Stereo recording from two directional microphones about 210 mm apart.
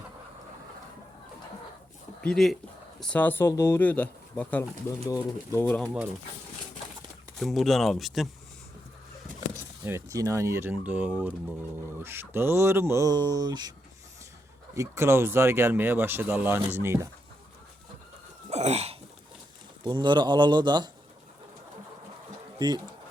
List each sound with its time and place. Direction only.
2.2 s speech: centre (ahead or behind)
7.3 s speech: centre (ahead or behind)
9.8 s speech: 15° right (ahead or behind)
14.8 s speech: 10° right (ahead or behind)
18.5 s a sound: 30° right (ahead or behind)
19.8 s speech: 20° right (ahead or behind)
22.5 s speech: 20° right (ahead or behind)